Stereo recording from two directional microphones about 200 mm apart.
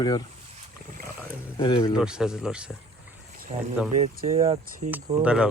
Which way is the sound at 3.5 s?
30° right (ahead or behind).